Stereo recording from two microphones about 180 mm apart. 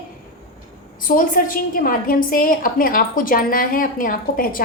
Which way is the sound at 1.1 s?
45° left (ahead or behind).